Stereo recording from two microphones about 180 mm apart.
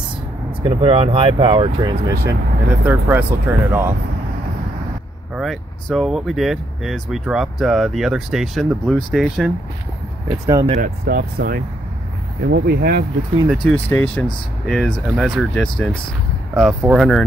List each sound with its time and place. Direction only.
0.6 s speech: 30° right (ahead or behind)
2.7 s speech: 10° right (ahead or behind)
5.3 s speech: centre (ahead or behind)
10.4 s speech: 20° right (ahead or behind)
10.8 s speech: 55° right (ahead or behind)
13.7 s speech: 10° left (ahead or behind)